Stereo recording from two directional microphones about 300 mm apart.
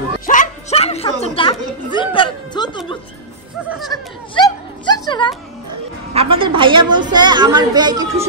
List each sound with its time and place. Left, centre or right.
0.3 s a sound: left
4.4 s music: centre
6.1 s a woman's voice: centre